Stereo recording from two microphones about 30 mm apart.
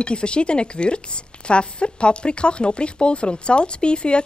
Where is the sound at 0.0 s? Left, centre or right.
Left.